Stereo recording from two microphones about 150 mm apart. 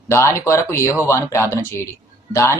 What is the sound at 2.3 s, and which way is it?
Speech, 20° left (ahead or behind).